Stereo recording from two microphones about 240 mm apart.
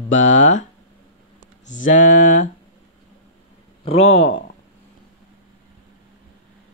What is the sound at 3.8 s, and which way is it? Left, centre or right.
Speech, left.